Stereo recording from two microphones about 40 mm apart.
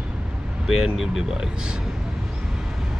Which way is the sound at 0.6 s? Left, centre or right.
Centre.